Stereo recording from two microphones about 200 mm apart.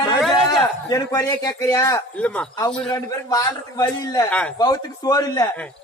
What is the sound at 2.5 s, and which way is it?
Speech, 20° left (ahead or behind).